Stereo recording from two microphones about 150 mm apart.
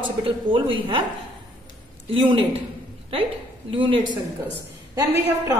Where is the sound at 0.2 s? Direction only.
35° right (ahead or behind).